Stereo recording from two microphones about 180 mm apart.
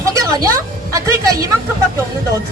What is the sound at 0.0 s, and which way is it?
Speech, 20° right (ahead or behind).